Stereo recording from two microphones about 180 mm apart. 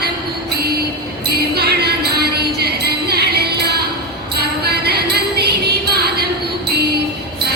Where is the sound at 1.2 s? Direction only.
60° right (ahead or behind).